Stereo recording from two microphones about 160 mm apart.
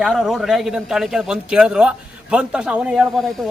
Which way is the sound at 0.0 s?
Centre (ahead or behind).